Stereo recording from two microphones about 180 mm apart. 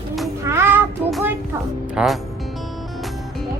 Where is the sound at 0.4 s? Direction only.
15° right (ahead or behind).